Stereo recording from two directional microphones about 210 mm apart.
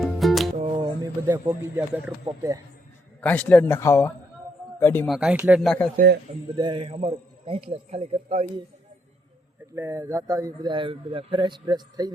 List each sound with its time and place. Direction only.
0.0 s music: centre (ahead or behind)
0.5 s music: 25° right (ahead or behind); by 2.1 s 10° right (ahead or behind)
2.2 s speech: 15° right (ahead or behind)
3.2 s speech: 5° left (ahead or behind)
5.1 s speech: 5° right (ahead or behind)
6.6 s speech: 25° right (ahead or behind)
9.7 s speech: 10° right (ahead or behind)